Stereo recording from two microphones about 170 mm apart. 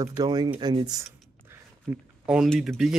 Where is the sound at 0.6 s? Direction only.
25° right (ahead or behind).